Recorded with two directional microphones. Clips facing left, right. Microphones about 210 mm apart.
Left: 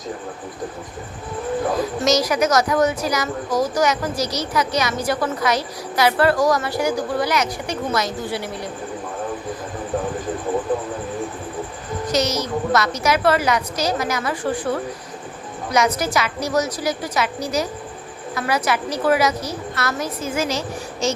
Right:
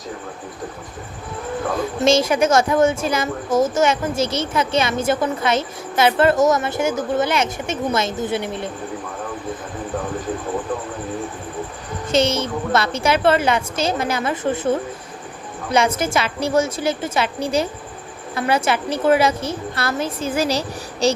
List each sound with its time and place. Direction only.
2.0 s a woman's voice: 25° right (ahead or behind)
12.0 s a woman's voice: 25° right (ahead or behind)